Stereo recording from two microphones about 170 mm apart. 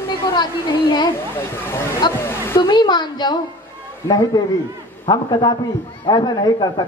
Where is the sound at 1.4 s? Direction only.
15° left (ahead or behind).